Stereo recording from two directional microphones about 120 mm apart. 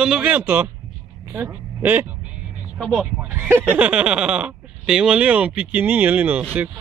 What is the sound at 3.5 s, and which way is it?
Speech, 15° right (ahead or behind).